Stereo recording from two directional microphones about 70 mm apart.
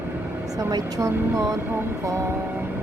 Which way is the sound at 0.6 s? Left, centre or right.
Right.